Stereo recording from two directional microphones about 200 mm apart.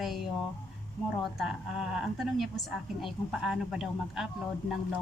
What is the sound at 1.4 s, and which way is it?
Speech, centre (ahead or behind).